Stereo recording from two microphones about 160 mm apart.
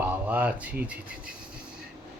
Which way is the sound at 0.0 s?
10° right (ahead or behind).